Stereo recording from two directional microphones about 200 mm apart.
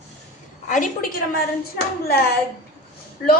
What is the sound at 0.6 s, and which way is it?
A woman's voice, 40° left (ahead or behind).